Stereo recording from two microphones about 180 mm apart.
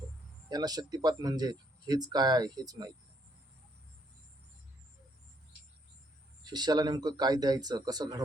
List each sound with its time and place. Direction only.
0.5 s speech: 20° right (ahead or behind)
6.4 s speech: 25° right (ahead or behind)